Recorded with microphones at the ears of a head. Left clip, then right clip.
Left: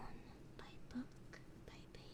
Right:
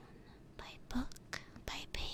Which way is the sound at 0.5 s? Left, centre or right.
Right.